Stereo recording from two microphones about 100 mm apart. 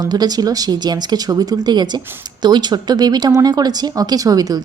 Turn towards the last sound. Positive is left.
turn(degrees=-40)  # may be behind; listen again after turning